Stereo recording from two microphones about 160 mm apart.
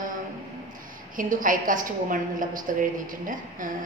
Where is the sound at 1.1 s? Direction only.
55° right (ahead or behind).